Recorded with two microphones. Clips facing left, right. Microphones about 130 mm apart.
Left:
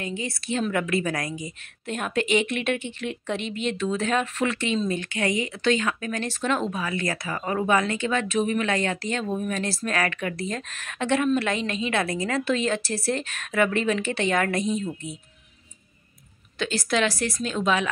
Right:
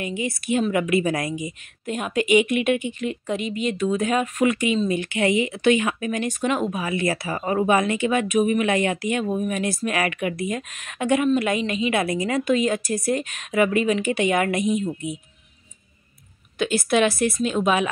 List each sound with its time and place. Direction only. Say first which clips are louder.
0.0 s speech: right 4 dB; 15° right (ahead or behind)
1.9 s speech: right 4 dB; 5° right (ahead or behind)
6.7 s speech: right 4 dB; 20° right (ahead or behind)
16.5 s a woman's voice: right 5 dB; 20° right (ahead or behind)